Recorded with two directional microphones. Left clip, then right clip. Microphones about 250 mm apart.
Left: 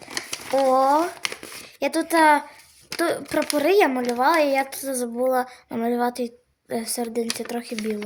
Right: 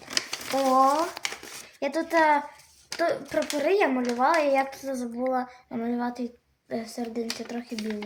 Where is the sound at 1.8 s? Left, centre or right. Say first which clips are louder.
Left 4 dB; left.